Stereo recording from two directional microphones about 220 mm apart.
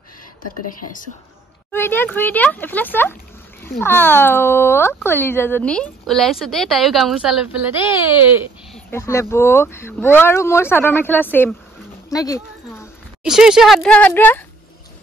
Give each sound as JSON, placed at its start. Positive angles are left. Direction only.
{"t": 1.7, "sound": "speech", "side_deg": 10}
{"t": 8.7, "sound": "speech", "side_deg": 10}
{"t": 13.2, "sound": "speech", "side_deg": -5}